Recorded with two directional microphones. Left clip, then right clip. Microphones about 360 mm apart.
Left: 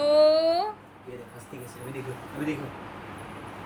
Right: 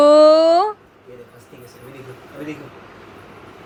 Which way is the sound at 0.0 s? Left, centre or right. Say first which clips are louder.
Right 10 dB; centre.